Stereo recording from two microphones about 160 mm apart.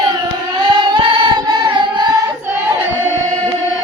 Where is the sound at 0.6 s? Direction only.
30° right (ahead or behind).